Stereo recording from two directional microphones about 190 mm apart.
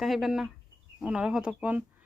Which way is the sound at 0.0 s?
Centre (ahead or behind).